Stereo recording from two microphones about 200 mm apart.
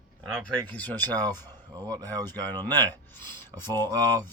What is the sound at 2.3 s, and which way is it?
Speech, 10° left (ahead or behind).